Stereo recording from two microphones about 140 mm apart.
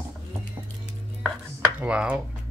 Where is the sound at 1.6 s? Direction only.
10° right (ahead or behind).